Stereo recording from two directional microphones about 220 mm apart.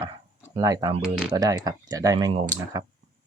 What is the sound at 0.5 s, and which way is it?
Speech, 15° right (ahead or behind).